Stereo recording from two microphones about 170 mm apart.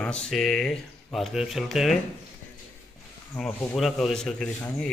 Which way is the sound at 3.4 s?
5° left (ahead or behind).